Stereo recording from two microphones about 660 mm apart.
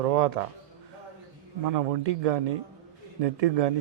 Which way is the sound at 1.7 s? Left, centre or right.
Right.